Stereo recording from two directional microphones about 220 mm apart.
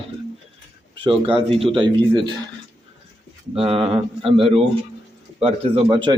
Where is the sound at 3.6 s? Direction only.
25° right (ahead or behind).